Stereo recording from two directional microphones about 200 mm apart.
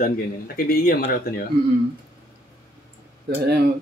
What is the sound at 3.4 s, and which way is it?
Speech, 55° right (ahead or behind).